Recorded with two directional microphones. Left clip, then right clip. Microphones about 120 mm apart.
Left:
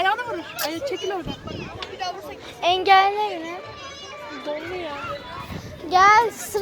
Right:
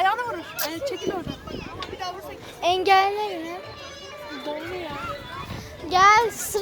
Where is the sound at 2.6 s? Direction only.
45° right (ahead or behind).